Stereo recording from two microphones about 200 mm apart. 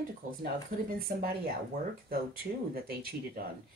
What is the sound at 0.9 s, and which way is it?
Speech, 50° right (ahead or behind).